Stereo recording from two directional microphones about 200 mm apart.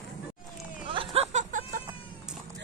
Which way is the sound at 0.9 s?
25° right (ahead or behind).